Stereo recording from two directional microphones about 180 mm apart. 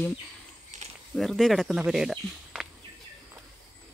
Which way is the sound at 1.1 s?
Centre (ahead or behind).